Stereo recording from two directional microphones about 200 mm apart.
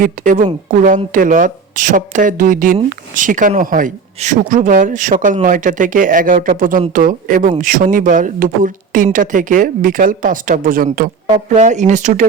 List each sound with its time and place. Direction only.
0.0 s speech: 40° right (ahead or behind)